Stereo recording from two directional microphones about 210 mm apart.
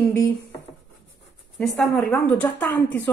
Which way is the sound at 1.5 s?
Centre (ahead or behind).